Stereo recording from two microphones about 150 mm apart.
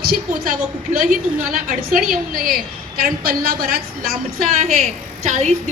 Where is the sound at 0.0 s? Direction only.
80° right.